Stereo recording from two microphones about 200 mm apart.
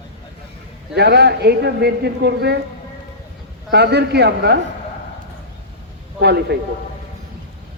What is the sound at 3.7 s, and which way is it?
Speech, 55° right (ahead or behind).